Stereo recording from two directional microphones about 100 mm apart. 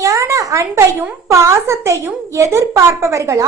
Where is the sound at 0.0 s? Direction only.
30° right (ahead or behind).